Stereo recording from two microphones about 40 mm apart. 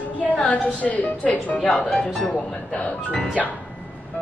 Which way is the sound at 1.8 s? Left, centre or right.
Left.